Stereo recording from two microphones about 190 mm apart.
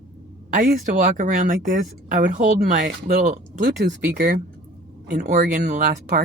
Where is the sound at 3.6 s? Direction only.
55° right (ahead or behind).